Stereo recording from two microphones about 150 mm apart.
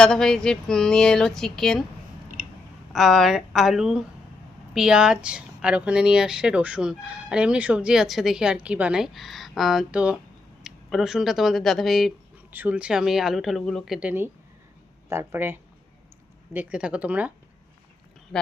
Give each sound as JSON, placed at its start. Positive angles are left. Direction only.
{"t": 0.0, "sound": "speech", "side_deg": 5}
{"t": 2.9, "sound": "speech", "side_deg": 0}
{"t": 12.5, "sound": "speech", "side_deg": -10}